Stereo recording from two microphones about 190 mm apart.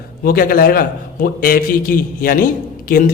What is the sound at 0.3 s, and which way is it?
A man's voice, 50° left (ahead or behind).